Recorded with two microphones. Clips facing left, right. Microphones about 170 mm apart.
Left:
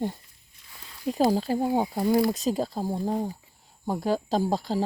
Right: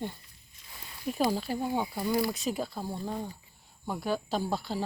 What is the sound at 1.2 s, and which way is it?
Speech, 35° left (ahead or behind).